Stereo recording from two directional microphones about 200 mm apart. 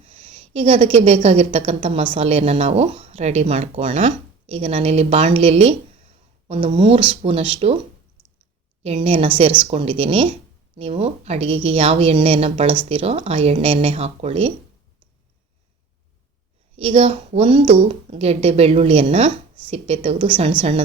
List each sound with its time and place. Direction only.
0.0 s a woman's voice: 30° right (ahead or behind)
8.8 s speech: 30° right (ahead or behind)
16.7 s speech: 30° right (ahead or behind)